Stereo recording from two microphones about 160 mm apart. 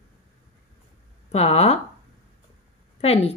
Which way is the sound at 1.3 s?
40° left (ahead or behind).